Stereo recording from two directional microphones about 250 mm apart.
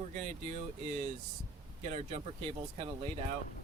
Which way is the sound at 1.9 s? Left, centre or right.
Right.